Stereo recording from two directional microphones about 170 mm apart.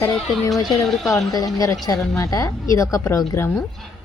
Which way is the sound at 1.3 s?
20° left (ahead or behind).